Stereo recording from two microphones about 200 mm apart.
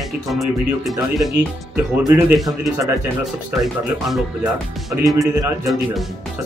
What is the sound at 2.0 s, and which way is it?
Speech, 15° right (ahead or behind).